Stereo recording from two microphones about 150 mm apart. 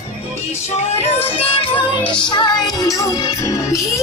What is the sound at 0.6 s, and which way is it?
Music, 45° left (ahead or behind).